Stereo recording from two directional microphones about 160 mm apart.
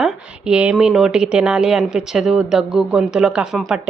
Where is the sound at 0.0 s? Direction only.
5° right (ahead or behind).